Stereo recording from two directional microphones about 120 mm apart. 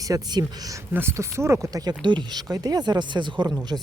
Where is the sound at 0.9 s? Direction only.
20° right (ahead or behind).